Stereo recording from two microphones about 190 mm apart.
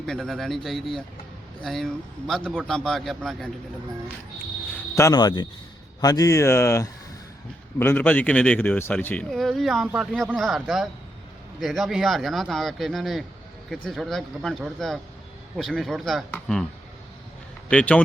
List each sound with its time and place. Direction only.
0.0 s a man's voice: centre (ahead or behind)
4.9 s a man's voice: 20° left (ahead or behind); by 16.6 s 5° left (ahead or behind)
17.7 s speech: 5° left (ahead or behind)